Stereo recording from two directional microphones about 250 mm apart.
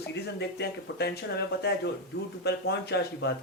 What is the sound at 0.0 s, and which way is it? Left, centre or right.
Speech, left.